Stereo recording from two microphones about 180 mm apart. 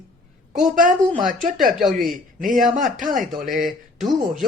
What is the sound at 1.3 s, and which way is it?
Speech, 45° right (ahead or behind).